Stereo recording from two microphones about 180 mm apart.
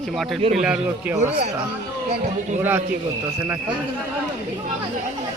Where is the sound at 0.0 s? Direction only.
Centre (ahead or behind).